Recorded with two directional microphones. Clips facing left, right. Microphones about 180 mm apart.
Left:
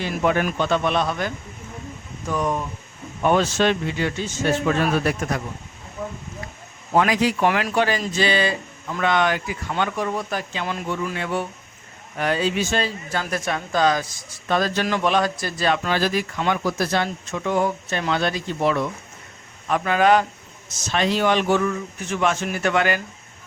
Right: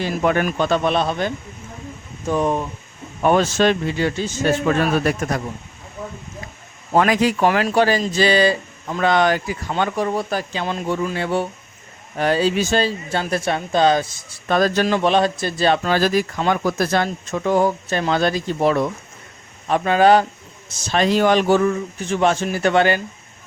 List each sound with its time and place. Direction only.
0.0 s speech: 45° right (ahead or behind); by 2.6 s 25° right (ahead or behind)
3.2 s speech: 45° right (ahead or behind)
6.9 s speech: 50° right (ahead or behind)
7.4 s speech: 35° right (ahead or behind)
14.4 s speech: 45° right (ahead or behind)
14.8 s speech: 30° right (ahead or behind)
19.6 s speech: 30° right (ahead or behind)